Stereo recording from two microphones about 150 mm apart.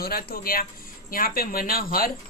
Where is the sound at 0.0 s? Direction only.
90° left.